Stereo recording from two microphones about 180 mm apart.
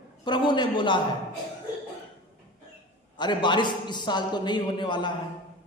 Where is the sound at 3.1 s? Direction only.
25° left (ahead or behind).